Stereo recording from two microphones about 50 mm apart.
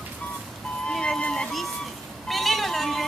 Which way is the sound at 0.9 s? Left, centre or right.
Centre.